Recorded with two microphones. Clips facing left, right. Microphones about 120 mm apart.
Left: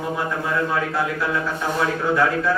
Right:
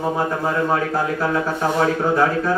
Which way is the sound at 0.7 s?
40° right (ahead or behind).